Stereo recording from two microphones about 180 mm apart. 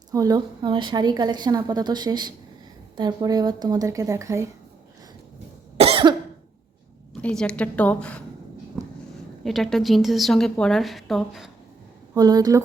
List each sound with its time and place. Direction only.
0.1 s a woman's voice: 20° right (ahead or behind)
5.7 s cough: 35° right (ahead or behind)
7.1 s a woman's voice: 5° left (ahead or behind)
8.7 s a sound: 10° right (ahead or behind)
9.4 s a woman's voice: centre (ahead or behind)
12.1 s a woman's voice: 20° right (ahead or behind)